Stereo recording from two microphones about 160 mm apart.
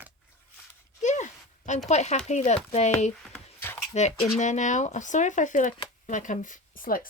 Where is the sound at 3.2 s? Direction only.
10° left (ahead or behind).